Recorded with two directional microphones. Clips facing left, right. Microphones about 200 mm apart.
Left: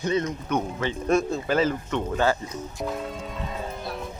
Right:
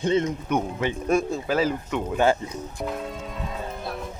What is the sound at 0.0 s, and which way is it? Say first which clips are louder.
Speech: right 3 dB; 25° right (ahead or behind).